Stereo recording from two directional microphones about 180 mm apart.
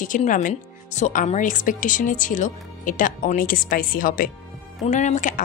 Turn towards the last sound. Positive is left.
turn(degrees=45)  # may be behind; listen again after turning